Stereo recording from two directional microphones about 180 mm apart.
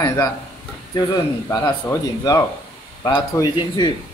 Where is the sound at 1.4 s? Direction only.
20° left (ahead or behind).